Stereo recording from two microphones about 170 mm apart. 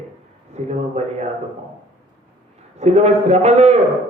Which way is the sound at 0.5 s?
40° right (ahead or behind).